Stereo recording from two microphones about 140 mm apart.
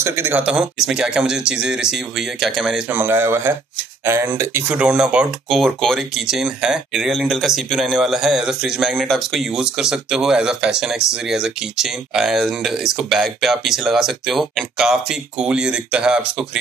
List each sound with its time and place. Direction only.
0.0 s speech: 20° right (ahead or behind); by 2.8 s centre (ahead or behind)
2.9 s speech: 15° right (ahead or behind)